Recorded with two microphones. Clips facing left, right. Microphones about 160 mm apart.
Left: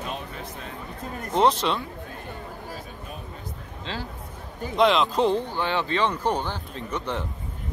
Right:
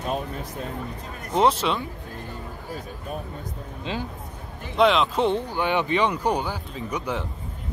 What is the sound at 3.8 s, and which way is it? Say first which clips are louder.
Speech: right 4 dB; 15° right (ahead or behind).